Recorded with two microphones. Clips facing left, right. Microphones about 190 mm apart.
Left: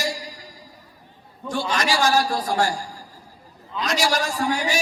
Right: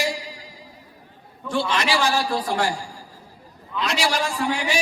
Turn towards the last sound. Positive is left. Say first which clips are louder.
# left 1 dB
turn(degrees=40)  # may be behind; listen again after turning